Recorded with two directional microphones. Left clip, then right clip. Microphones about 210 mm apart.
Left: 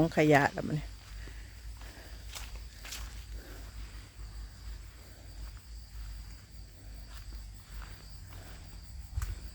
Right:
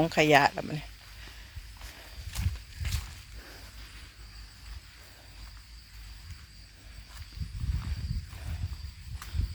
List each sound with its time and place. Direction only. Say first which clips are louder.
0.0 s speech: right 3 dB; 15° left (ahead or behind)
2.3 s horse: right 3 dB; 40° right (ahead or behind)